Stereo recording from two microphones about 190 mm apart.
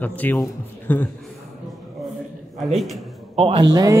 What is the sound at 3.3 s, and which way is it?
Speech, 30° right (ahead or behind).